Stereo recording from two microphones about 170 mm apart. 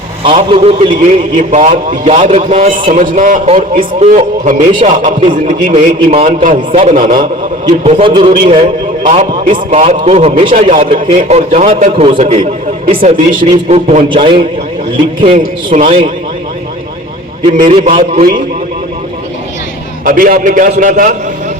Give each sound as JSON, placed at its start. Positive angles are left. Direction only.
{"t": 0.3, "sound": "a man's voice", "side_deg": -35}
{"t": 7.9, "sound": "a man's voice", "side_deg": -35}
{"t": 13.7, "sound": "a man's voice", "side_deg": -40}
{"t": 17.7, "sound": "a man's voice", "side_deg": -40}
{"t": 20.1, "sound": "a man's voice", "side_deg": -55}